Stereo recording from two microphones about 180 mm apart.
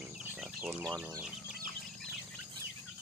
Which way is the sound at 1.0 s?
10° right (ahead or behind).